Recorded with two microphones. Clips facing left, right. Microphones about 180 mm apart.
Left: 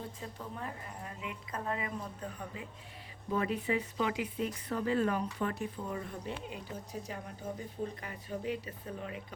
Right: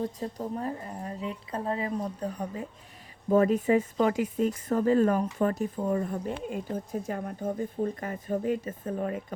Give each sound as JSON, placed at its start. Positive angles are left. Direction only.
{"t": 0.0, "sound": "a woman's voice", "side_deg": -40}